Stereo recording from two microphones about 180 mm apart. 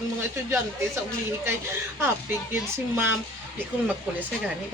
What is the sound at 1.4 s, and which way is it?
Speech, 15° right (ahead or behind).